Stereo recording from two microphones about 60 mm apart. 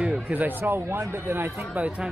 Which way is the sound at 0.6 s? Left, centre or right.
Right.